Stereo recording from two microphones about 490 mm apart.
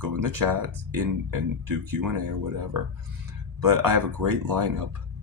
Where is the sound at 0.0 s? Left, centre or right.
Right.